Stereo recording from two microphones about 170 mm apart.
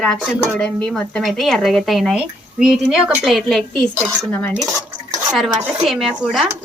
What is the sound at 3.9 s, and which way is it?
Cutlery, 15° right (ahead or behind).